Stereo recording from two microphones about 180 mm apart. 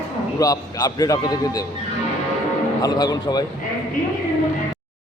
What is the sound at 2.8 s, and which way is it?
Speech, 20° left (ahead or behind).